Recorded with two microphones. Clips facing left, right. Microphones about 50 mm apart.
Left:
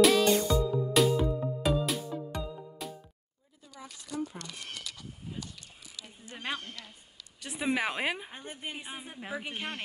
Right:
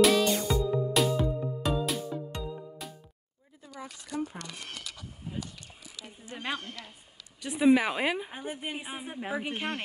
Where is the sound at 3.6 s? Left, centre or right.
Right.